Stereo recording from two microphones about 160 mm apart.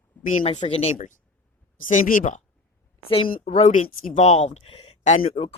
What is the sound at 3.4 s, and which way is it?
A woman's voice, 45° left (ahead or behind).